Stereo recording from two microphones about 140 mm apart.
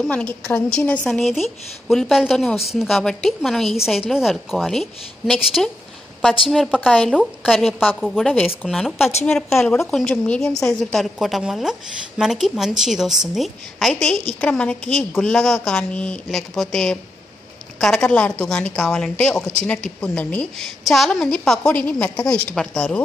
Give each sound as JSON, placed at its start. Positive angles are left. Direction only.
{"t": 0.0, "sound": "a woman's voice", "side_deg": 10}
{"t": 7.2, "sound": "a woman's voice", "side_deg": 0}